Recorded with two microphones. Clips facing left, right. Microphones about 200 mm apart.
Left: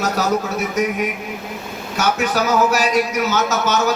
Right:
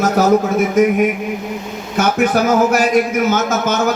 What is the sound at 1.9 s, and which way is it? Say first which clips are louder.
A man's voice: right 5 dB; 55° right (ahead or behind).